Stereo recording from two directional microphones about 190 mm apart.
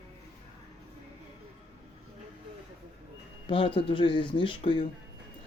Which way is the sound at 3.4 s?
30° left (ahead or behind).